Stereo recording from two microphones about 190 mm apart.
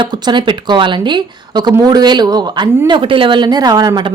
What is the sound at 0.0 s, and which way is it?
Speech, 25° right (ahead or behind).